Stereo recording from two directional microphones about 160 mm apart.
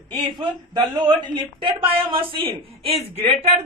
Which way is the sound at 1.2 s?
30° right (ahead or behind).